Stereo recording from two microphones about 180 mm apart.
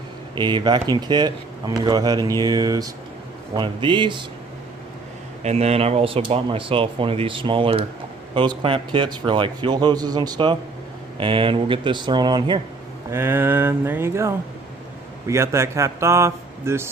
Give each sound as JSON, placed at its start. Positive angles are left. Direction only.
{"t": 0.3, "sound": "a man's voice", "side_deg": -25}
{"t": 5.4, "sound": "a man's voice", "side_deg": -35}
{"t": 13.1, "sound": "speech", "side_deg": -15}